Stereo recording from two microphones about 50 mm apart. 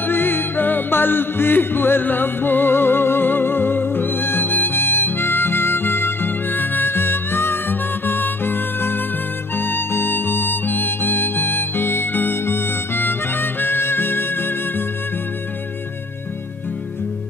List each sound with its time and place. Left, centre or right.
0.0 s music: left